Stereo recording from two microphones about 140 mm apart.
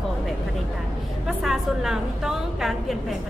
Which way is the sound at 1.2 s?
Centre (ahead or behind).